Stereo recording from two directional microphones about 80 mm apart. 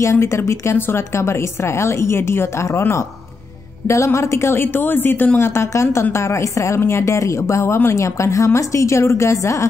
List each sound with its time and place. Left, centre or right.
0.0 s a woman's voice: left